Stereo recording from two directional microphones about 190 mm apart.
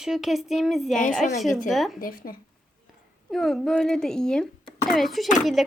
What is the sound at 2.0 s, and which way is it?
Speech, 50° left (ahead or behind).